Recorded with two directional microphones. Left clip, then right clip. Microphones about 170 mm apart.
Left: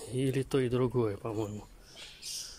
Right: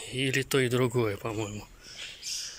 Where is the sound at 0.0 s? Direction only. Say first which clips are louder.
Right 4 dB; 25° left (ahead or behind).